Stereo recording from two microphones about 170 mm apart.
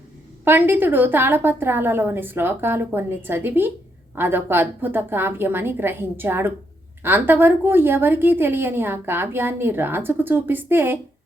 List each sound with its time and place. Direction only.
0.4 s a woman's voice: 10° right (ahead or behind)